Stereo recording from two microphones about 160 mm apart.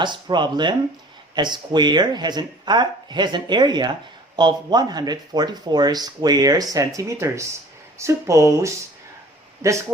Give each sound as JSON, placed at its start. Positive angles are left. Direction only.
{"t": 0.0, "sound": "speech", "side_deg": -30}